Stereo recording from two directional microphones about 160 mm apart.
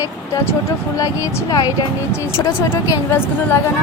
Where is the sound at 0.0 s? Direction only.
20° left (ahead or behind).